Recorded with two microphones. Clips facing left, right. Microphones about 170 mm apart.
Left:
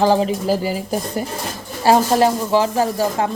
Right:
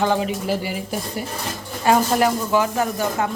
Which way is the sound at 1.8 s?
30° left (ahead or behind).